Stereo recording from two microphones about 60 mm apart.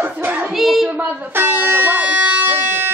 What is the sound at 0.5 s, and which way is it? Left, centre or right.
Child singing, centre.